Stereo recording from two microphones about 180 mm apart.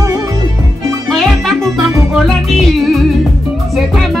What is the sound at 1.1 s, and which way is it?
Music, centre (ahead or behind).